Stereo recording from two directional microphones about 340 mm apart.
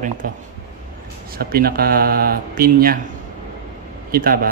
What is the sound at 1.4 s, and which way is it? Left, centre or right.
Speech, right.